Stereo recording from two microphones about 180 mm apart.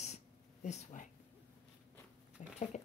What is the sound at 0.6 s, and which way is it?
Speech, 45° left (ahead or behind).